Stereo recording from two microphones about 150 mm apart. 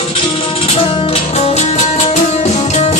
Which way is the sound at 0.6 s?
40° left (ahead or behind).